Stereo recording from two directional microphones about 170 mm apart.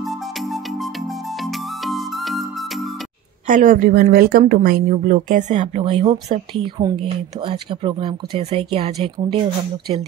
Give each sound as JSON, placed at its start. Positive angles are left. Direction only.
{"t": 1.9, "sound": "music", "side_deg": 0}
{"t": 3.4, "sound": "speech", "side_deg": -50}